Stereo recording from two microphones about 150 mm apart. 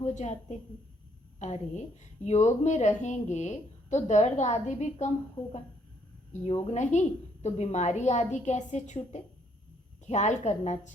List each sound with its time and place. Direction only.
0.0 s a woman's voice: 50° left (ahead or behind)
6.9 s a woman's voice: 55° left (ahead or behind)